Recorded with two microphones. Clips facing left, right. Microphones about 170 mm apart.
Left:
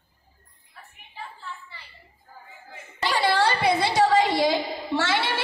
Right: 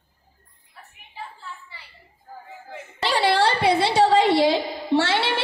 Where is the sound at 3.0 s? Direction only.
30° right (ahead or behind).